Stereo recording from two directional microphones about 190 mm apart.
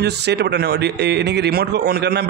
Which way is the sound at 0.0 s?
60° right (ahead or behind).